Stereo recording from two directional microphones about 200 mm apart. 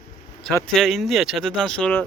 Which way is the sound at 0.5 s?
5° left (ahead or behind).